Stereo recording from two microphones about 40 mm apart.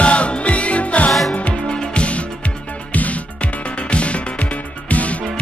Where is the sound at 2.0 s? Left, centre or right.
Left.